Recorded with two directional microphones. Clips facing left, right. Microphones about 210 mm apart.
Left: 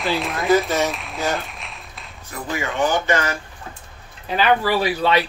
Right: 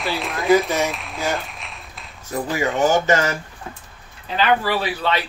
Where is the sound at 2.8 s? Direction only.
40° right (ahead or behind).